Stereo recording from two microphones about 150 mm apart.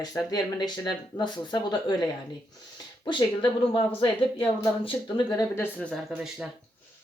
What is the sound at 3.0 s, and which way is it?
Speech, 30° left (ahead or behind).